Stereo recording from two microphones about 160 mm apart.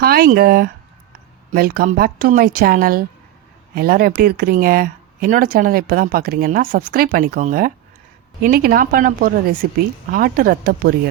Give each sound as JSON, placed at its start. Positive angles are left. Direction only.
{"t": 0.0, "sound": "speech", "side_deg": -70}